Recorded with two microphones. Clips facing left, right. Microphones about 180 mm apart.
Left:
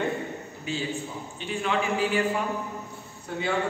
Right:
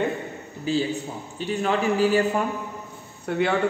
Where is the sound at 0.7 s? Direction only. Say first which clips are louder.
Right 7 dB; 35° right (ahead or behind).